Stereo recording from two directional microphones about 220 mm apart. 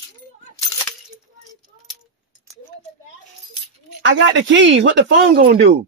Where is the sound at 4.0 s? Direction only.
55° right (ahead or behind).